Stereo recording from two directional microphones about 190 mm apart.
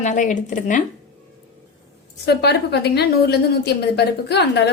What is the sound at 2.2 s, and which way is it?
A woman's voice, 60° left (ahead or behind).